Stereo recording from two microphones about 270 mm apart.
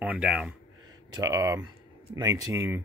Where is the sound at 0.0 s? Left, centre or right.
Centre.